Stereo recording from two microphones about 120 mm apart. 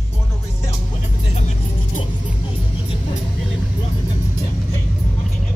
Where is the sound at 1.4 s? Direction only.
75° left (ahead or behind).